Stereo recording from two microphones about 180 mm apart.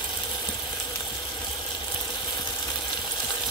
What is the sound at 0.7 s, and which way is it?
Water, 15° left (ahead or behind).